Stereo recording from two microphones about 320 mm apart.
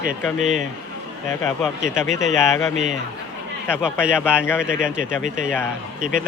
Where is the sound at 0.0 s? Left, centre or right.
Right.